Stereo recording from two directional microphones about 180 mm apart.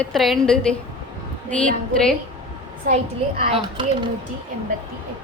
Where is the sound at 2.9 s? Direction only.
45° right (ahead or behind).